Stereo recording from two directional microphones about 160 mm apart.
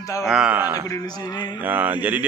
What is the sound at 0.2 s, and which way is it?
A man's voice, 5° right (ahead or behind).